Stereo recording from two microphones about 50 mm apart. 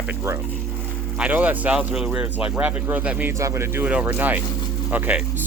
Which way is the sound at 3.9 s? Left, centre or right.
Right.